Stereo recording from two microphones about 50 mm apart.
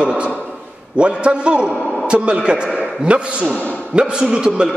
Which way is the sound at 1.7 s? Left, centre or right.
Centre.